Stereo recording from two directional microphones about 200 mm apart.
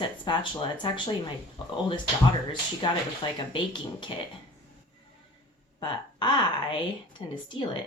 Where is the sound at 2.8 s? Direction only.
25° left (ahead or behind).